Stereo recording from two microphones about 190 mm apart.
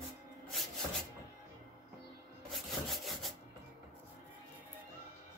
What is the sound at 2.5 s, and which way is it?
Wood, centre (ahead or behind).